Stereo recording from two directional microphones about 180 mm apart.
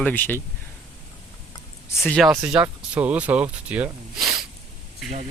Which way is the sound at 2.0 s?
Centre (ahead or behind).